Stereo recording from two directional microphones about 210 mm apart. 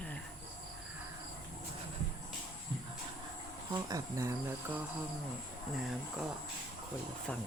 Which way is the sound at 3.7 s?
15° right (ahead or behind).